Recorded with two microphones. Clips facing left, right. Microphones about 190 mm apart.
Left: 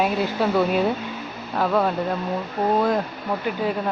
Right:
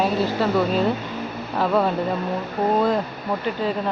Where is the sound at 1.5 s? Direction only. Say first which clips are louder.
Right 1 dB; centre (ahead or behind).